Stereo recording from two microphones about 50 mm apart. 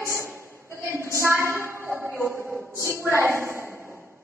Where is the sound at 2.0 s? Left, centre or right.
Right.